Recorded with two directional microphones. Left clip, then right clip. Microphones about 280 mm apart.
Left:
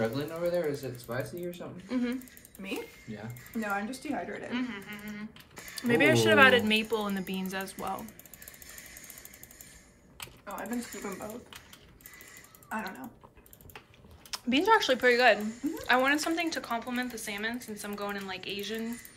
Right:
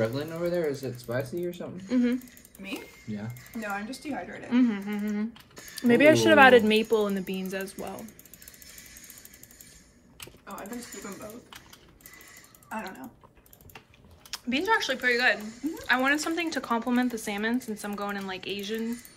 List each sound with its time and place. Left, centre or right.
0.0 s speech: right
3.6 s speech: centre
4.5 s speech: centre
12.6 s typing: centre
14.3 s speech: centre